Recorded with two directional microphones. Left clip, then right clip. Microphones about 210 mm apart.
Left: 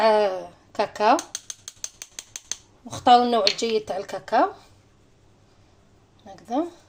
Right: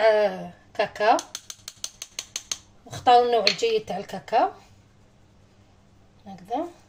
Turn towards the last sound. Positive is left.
turn(degrees=30)  # may be behind; listen again after turning